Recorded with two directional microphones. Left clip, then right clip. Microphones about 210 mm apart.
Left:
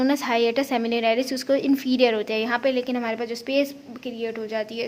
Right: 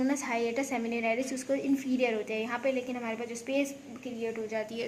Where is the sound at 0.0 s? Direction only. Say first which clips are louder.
Left 9 dB; 35° left (ahead or behind).